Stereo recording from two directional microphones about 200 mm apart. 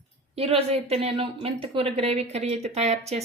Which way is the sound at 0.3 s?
30° right (ahead or behind).